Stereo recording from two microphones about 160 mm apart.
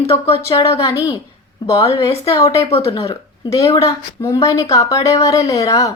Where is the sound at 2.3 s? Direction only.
20° left (ahead or behind).